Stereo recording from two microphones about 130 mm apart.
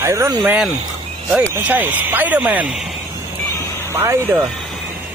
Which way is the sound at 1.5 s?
15° right (ahead or behind).